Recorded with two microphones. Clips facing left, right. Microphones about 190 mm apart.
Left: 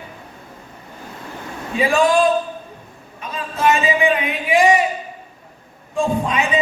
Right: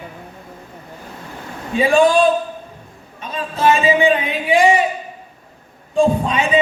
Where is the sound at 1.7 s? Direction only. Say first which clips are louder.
Right 4 dB; 30° right (ahead or behind).